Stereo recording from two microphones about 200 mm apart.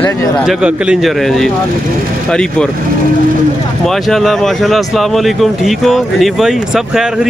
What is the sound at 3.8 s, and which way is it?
Speech, centre (ahead or behind).